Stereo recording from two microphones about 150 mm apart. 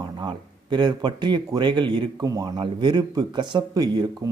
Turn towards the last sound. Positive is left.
turn(degrees=-25)  # may be behind; listen again after turning